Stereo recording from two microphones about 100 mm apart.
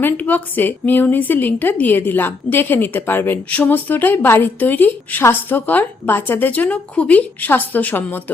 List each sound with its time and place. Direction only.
0.0 s a woman's voice: 15° left (ahead or behind)